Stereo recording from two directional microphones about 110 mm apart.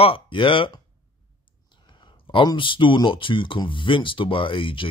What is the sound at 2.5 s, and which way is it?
Speech, 50° left (ahead or behind).